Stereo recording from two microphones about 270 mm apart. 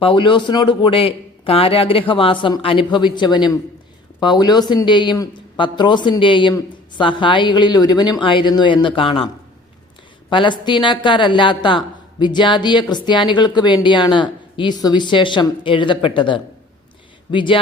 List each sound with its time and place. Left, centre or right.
0.0 s a man's voice: centre